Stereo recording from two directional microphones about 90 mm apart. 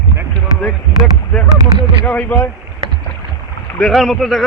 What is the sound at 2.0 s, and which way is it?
Speech, 15° left (ahead or behind).